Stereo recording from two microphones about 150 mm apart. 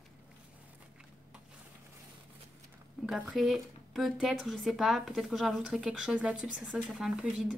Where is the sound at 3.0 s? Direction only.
5° right (ahead or behind).